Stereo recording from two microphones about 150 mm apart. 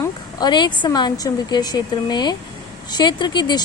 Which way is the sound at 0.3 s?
30° left (ahead or behind).